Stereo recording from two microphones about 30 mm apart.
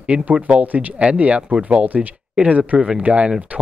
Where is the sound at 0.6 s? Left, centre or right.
Right.